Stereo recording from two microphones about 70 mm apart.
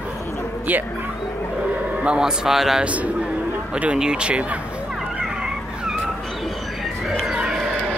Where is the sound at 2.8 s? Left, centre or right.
Centre.